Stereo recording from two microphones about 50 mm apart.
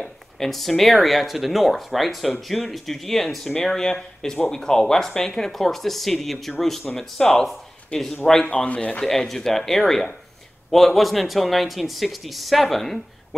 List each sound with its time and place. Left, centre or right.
0.0 s speech: centre
8.5 s speech: left
9.0 s speech: centre